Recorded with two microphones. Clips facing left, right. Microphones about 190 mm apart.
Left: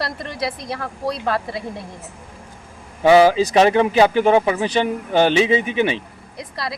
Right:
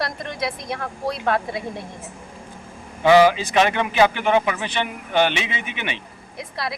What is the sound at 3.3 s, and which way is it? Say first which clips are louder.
Speech: left 6 dB; 35° left (ahead or behind).